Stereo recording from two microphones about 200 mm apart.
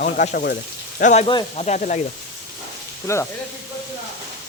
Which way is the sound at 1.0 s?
35° left (ahead or behind).